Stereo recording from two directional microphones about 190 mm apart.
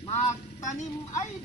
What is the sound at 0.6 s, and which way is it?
Speech, 40° left (ahead or behind).